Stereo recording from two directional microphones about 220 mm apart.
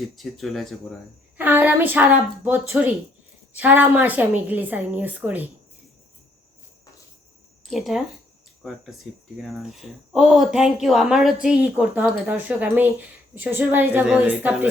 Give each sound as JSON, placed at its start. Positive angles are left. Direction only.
{"t": 0.2, "sound": "a woman's voice", "side_deg": 0}
{"t": 7.7, "sound": "a woman's voice", "side_deg": 0}